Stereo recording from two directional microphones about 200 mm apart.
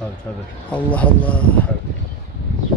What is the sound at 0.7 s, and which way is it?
Speech, 5° left (ahead or behind).